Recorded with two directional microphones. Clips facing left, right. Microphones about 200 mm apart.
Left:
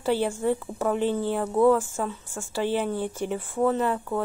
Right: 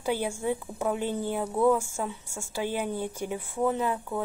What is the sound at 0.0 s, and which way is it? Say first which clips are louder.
Speech: left 4 dB; 10° right (ahead or behind).